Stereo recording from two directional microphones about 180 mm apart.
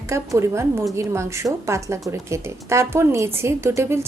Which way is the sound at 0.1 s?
15° right (ahead or behind).